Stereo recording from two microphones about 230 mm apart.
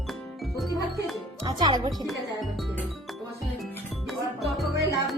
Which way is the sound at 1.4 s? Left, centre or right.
Centre.